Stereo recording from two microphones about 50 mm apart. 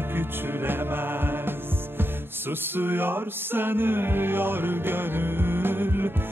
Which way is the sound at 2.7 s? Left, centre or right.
Right.